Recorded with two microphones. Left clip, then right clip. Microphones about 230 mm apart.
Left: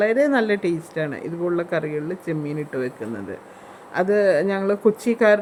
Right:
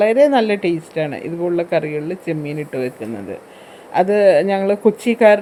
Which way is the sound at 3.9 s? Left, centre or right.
Centre.